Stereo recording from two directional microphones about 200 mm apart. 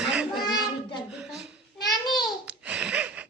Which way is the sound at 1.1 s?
5° right (ahead or behind).